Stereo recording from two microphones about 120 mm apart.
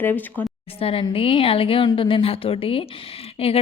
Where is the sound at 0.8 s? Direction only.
50° left (ahead or behind).